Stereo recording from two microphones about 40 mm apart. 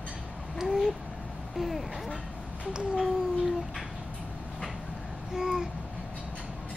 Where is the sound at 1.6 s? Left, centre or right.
Centre.